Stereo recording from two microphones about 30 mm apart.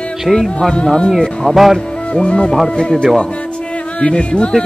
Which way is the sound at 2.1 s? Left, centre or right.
Left.